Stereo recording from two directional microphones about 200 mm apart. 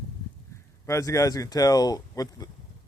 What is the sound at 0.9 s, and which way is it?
Speech, 15° left (ahead or behind).